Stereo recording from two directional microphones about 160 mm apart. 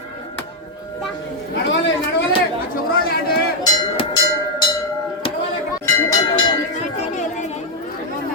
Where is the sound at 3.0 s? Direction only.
70° left (ahead or behind).